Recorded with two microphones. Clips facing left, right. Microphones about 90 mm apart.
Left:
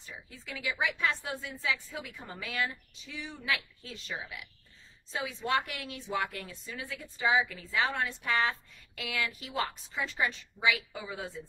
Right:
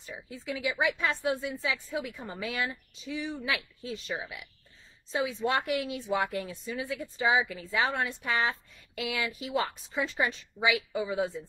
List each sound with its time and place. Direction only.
0.0 s a woman's voice: 15° right (ahead or behind)